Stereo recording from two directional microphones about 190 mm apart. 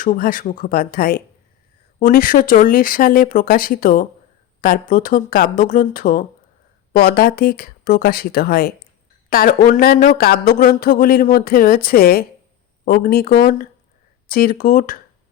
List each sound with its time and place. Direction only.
0.0 s speech: 45° left (ahead or behind)